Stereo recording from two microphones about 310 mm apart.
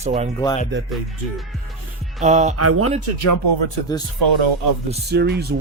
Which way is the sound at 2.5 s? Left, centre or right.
Right.